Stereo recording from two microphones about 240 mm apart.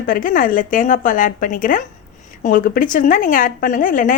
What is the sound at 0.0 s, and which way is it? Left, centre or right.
A woman's voice, left.